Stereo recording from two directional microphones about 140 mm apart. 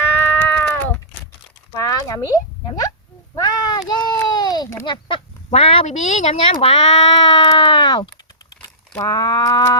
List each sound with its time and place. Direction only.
0.3 s cat: 10° left (ahead or behind)
1.8 s speech: 25° left (ahead or behind)
3.3 s a sound: 30° left (ahead or behind)
5.5 s speech: 40° left (ahead or behind); by 9.7 s 25° left (ahead or behind)